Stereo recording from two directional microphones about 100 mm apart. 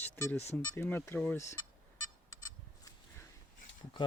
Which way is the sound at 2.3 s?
35° left (ahead or behind).